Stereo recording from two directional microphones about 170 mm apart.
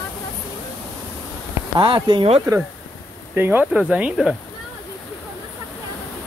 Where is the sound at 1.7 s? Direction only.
30° right (ahead or behind).